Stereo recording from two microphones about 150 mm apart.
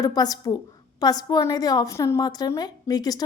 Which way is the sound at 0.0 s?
25° left (ahead or behind).